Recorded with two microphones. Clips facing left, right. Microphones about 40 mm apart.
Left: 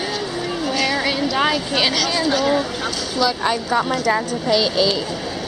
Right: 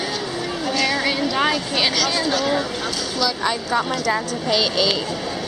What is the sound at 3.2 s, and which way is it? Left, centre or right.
Speech, centre.